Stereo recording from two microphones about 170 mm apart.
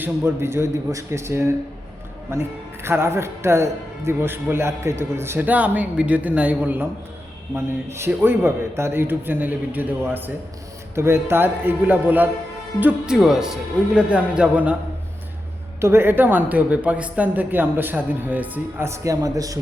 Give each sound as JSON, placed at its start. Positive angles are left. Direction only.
{"t": 0.0, "sound": "speech", "side_deg": -15}
{"t": 15.8, "sound": "speech", "side_deg": -15}